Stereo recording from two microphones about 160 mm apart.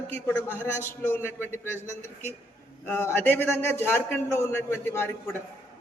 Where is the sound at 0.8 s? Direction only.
15° left (ahead or behind).